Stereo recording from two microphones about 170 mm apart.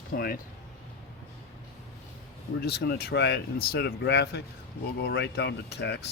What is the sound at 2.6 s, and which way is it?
Speech, 70° left (ahead or behind).